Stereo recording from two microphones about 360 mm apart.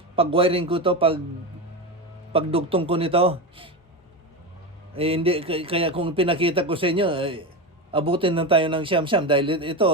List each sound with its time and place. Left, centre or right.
0.2 s a man's voice: centre
2.3 s a man's voice: centre
4.9 s a man's voice: centre